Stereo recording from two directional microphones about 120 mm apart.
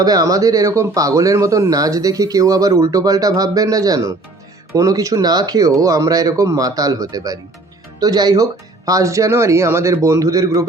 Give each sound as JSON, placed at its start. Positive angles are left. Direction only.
{"t": 0.0, "sound": "a man's voice", "side_deg": -30}